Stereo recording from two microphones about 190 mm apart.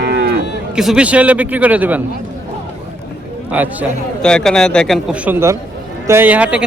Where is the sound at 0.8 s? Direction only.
5° right (ahead or behind).